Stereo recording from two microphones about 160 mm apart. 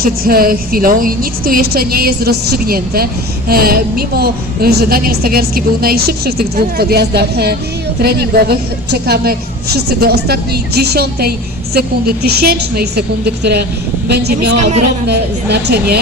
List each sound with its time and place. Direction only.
0.0 s a woman's voice: 65° right (ahead or behind); by 7.5 s 90° right
8.0 s a woman's voice: 80° right